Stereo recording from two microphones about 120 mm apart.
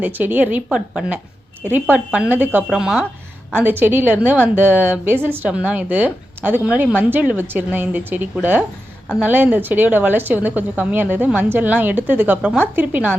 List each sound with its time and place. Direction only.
0.0 s a woman's voice: 15° right (ahead or behind)